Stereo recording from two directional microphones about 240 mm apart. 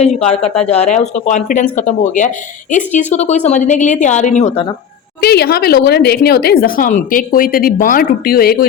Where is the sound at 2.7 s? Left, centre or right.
Left.